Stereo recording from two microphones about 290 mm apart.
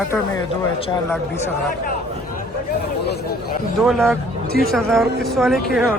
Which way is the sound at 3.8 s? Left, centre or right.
Centre.